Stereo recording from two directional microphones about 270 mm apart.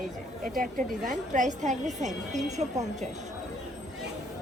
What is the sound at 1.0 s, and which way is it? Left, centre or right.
A woman's voice, right.